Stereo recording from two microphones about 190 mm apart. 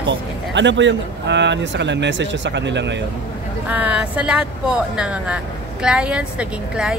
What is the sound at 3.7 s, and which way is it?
A woman's voice, 10° right (ahead or behind).